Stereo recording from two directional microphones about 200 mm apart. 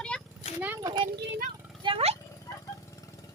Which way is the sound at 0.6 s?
15° right (ahead or behind).